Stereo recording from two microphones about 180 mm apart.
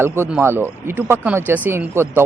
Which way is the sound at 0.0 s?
10° right (ahead or behind).